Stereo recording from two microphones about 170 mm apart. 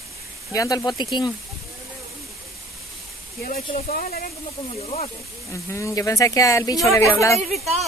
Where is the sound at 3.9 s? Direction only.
55° left (ahead or behind).